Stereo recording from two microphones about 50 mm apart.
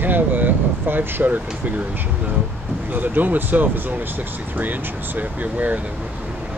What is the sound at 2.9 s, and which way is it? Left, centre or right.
Speech, right.